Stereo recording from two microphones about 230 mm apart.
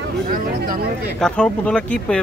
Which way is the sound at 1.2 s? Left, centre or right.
Centre.